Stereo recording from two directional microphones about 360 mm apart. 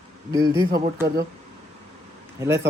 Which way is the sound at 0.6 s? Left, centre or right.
Right.